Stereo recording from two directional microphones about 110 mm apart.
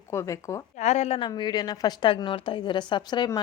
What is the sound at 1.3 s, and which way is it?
A woman's voice, 40° left (ahead or behind).